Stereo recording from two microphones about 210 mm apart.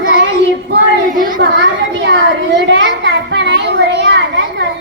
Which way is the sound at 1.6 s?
60° right (ahead or behind).